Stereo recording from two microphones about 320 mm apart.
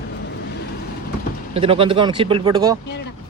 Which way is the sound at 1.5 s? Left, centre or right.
Centre.